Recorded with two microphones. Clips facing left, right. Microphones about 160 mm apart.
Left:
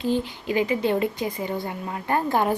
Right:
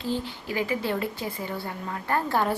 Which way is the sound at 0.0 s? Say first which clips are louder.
Left 5 dB; 20° left (ahead or behind).